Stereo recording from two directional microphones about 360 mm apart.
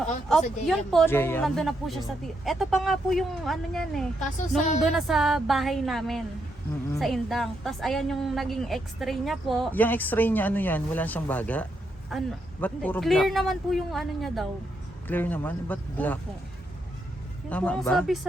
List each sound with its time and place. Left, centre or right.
0.7 s a woman's voice: centre
4.2 s a woman's voice: centre
4.8 s a woman's voice: centre
17.5 s a woman's voice: centre